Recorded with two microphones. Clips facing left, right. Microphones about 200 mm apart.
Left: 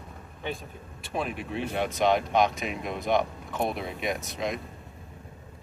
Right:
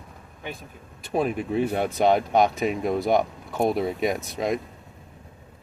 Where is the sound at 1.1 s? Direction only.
40° right (ahead or behind).